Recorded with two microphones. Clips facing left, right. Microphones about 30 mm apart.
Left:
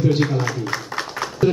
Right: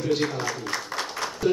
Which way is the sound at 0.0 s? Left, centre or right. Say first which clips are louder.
Left 5 dB; centre.